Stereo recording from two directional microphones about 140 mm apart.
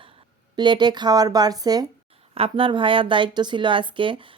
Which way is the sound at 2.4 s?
40° right (ahead or behind).